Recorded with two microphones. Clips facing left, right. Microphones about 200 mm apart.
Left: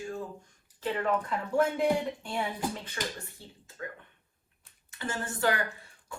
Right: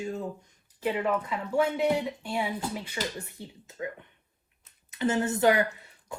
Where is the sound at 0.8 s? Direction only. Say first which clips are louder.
Right 2 dB; 10° right (ahead or behind).